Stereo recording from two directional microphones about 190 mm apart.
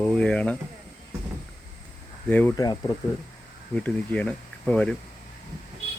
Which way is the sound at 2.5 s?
20° left (ahead or behind).